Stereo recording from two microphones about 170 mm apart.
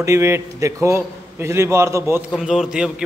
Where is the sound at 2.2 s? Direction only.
Centre (ahead or behind).